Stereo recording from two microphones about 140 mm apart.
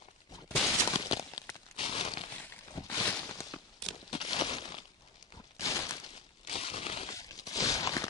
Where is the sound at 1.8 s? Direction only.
40° left (ahead or behind).